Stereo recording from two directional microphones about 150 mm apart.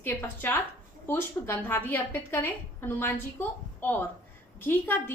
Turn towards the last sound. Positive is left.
turn(degrees=15)  # may be behind; listen again after turning